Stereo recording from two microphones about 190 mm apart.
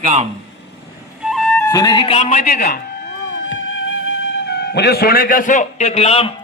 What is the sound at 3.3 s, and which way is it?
Music, 80° left.